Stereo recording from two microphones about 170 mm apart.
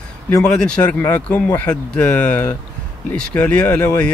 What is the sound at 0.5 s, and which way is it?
Speech, 5° left (ahead or behind).